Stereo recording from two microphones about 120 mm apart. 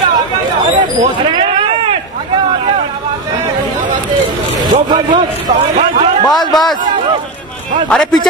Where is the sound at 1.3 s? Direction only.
45° right (ahead or behind).